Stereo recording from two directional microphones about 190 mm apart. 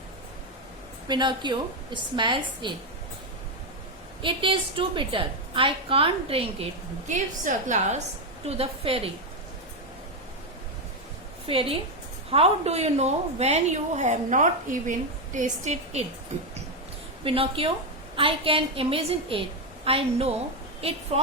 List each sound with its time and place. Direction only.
1.0 s a woman's voice: 25° right (ahead or behind)
4.2 s a woman's voice: 25° right (ahead or behind)
11.4 s a woman's voice: 30° right (ahead or behind)
17.2 s a woman's voice: 30° right (ahead or behind)